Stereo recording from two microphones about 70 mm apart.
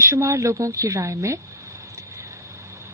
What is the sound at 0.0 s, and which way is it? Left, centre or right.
Speech, right.